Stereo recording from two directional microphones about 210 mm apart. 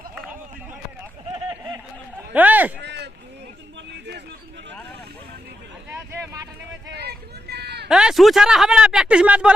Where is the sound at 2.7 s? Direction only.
55° right (ahead or behind).